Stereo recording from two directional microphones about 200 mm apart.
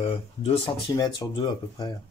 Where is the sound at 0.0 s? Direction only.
30° left (ahead or behind).